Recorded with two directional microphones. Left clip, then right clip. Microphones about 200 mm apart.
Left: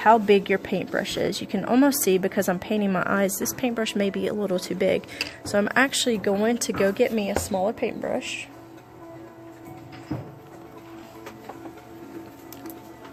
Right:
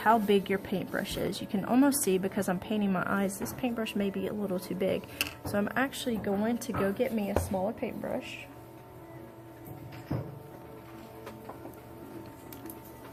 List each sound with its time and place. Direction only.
0.0 s speech: 35° left (ahead or behind); by 8.4 s 55° left (ahead or behind)